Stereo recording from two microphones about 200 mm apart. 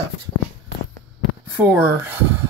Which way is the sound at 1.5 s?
10° right (ahead or behind).